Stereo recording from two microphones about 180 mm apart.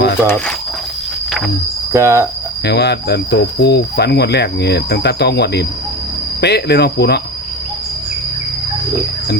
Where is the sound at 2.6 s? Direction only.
65° left (ahead or behind).